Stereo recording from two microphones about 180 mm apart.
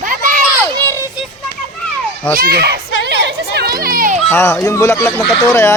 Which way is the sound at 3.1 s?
70° right (ahead or behind).